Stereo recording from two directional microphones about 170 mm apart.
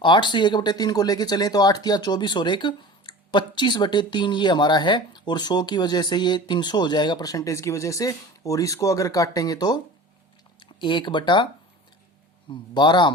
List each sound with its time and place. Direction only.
0.0 s speech: 30° left (ahead or behind)
12.5 s speech: 25° left (ahead or behind)